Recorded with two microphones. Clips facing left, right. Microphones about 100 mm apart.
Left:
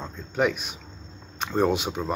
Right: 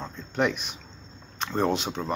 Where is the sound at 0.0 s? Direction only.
5° left (ahead or behind).